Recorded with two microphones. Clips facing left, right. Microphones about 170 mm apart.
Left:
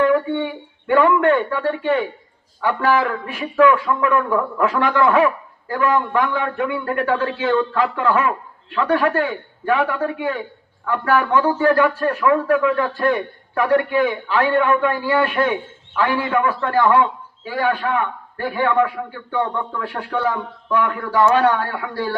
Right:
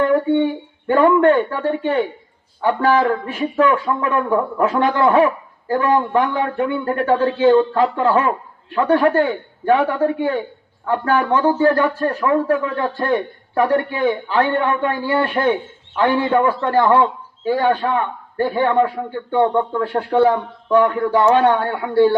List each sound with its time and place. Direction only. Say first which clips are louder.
0.9 s speech: right 2 dB; 35° right (ahead or behind)